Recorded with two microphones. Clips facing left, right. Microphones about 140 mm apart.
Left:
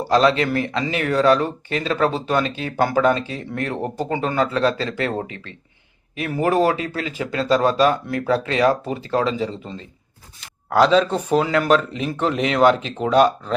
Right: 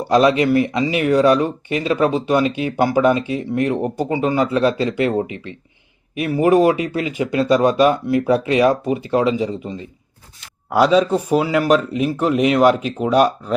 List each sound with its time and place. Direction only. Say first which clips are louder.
0.1 s speech: right 3 dB; 15° right (ahead or behind)